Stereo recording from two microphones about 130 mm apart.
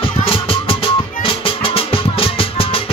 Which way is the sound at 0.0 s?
45° left (ahead or behind).